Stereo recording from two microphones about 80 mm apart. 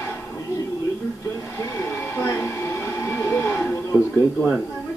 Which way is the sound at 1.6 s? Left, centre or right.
Left.